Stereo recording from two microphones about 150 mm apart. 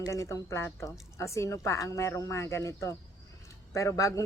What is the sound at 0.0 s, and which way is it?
Speech, 20° left (ahead or behind).